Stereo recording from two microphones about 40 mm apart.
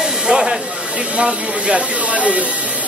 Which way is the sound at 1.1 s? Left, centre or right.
Right.